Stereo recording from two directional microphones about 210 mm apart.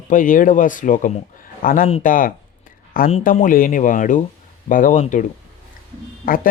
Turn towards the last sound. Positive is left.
turn(degrees=40)  # may be behind; listen again after turning